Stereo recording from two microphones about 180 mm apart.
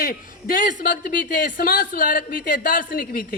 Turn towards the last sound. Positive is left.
turn(degrees=55)  # may be behind; listen again after turning